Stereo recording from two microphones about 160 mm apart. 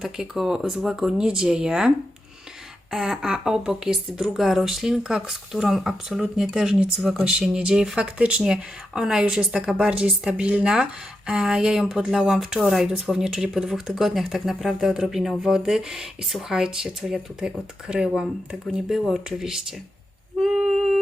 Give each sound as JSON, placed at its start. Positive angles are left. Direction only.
{"t": 0.0, "sound": "speech", "side_deg": -5}
{"t": 2.9, "sound": "speech", "side_deg": -5}
{"t": 20.4, "sound": "a sound", "side_deg": -5}